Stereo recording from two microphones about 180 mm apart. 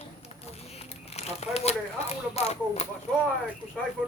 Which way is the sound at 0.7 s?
35° left (ahead or behind).